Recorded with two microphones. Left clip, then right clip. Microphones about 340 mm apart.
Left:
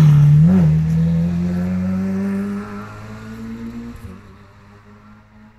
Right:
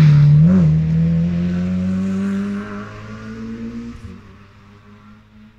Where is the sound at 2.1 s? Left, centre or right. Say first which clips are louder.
Even; centre.